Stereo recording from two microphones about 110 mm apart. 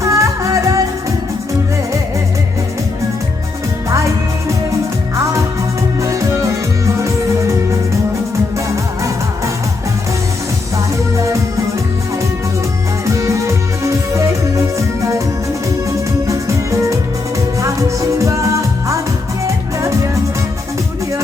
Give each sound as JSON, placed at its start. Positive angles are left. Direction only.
{"t": 0.0, "sound": "music", "side_deg": -30}
{"t": 6.0, "sound": "music", "side_deg": -30}
{"t": 8.5, "sound": "music", "side_deg": -30}
{"t": 13.1, "sound": "music", "side_deg": -30}